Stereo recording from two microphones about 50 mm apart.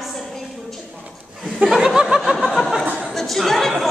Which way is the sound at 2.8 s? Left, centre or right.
Right.